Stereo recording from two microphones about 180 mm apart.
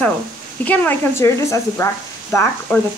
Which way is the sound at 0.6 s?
10° left (ahead or behind).